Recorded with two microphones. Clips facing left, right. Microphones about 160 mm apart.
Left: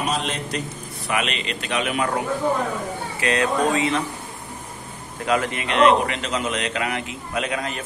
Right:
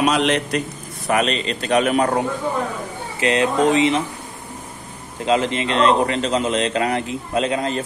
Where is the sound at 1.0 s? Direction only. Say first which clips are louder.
Right 6 dB; 40° right (ahead or behind).